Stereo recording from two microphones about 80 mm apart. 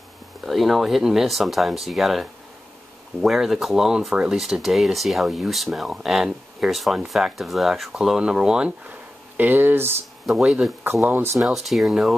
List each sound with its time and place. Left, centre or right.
0.5 s speech: centre
9.4 s speech: right
10.2 s speech: centre
11.1 s speech: right
11.4 s speech: centre